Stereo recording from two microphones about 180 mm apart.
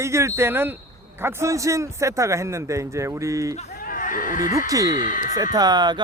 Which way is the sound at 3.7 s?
50° left (ahead or behind).